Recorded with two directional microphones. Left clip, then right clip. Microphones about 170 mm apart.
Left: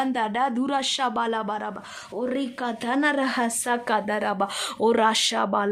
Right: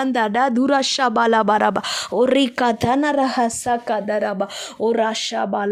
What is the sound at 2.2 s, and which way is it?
Speech, 70° right (ahead or behind).